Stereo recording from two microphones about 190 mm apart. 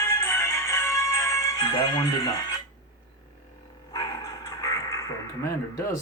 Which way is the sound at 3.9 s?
20° left (ahead or behind).